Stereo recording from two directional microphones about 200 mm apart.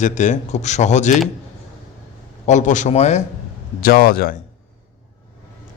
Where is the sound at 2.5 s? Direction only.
40° left (ahead or behind).